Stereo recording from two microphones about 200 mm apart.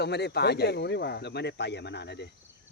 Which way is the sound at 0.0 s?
55° left (ahead or behind).